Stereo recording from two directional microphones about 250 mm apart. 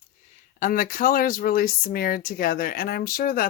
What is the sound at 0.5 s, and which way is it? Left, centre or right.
A woman's voice, left.